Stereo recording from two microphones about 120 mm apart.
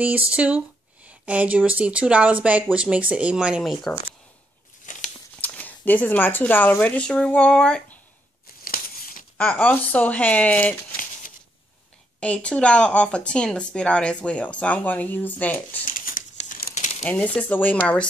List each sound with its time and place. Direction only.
0.4 s speech: 10° right (ahead or behind)
4.9 s biting: 90° left
5.4 s speech: 15° left (ahead or behind)
9.4 s speech: 10° left (ahead or behind)
12.2 s speech: 10° left (ahead or behind)
15.8 s crumpling: 90° left
17.0 s speech: 15° left (ahead or behind)